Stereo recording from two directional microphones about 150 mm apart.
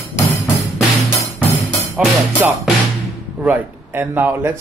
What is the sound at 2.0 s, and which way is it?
Speech, 10° right (ahead or behind).